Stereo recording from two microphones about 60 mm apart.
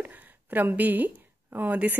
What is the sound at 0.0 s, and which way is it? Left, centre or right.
A woman's voice, right.